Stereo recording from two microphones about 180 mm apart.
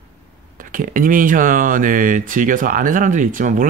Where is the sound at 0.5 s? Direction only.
50° right (ahead or behind).